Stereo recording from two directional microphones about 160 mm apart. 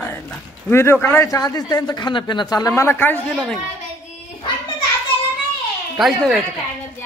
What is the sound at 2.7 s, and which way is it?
Speech, 15° left (ahead or behind).